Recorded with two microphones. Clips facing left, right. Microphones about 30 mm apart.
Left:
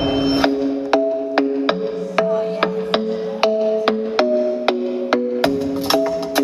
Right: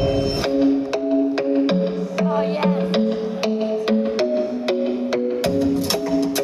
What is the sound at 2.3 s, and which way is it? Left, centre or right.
Music, right.